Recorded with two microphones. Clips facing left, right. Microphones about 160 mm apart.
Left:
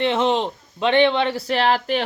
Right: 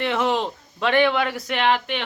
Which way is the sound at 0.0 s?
20° left (ahead or behind).